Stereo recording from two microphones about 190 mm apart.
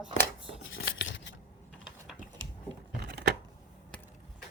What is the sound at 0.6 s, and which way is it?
Scissors, 90° left.